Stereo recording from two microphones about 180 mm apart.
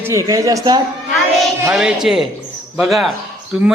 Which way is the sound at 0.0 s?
15° right (ahead or behind).